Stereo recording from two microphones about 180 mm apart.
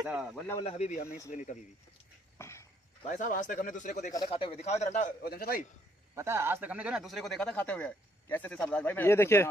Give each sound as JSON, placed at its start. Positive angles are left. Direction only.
{"t": 0.0, "sound": "speech", "side_deg": -5}
{"t": 0.6, "sound": "a man's voice", "side_deg": 35}
{"t": 2.3, "sound": "a sound", "side_deg": 15}
{"t": 3.1, "sound": "speech", "side_deg": 45}
{"t": 4.3, "sound": "a man's voice", "side_deg": 35}
{"t": 5.2, "sound": "a man's voice", "side_deg": 60}
{"t": 6.1, "sound": "speech", "side_deg": -15}